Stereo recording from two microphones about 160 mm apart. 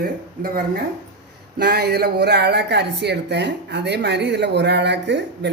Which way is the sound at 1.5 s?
90° right.